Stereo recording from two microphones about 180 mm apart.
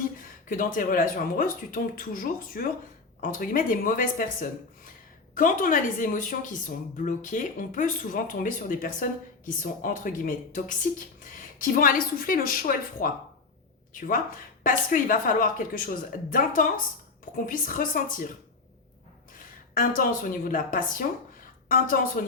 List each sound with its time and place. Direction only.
0.2 s speech: 50° left (ahead or behind)
19.4 s a woman's voice: 50° left (ahead or behind)